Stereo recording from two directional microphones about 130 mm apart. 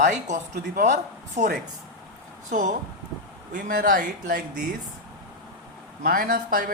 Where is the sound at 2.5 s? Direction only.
70° right (ahead or behind).